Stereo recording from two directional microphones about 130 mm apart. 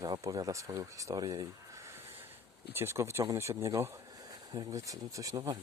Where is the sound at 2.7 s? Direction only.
20° right (ahead or behind).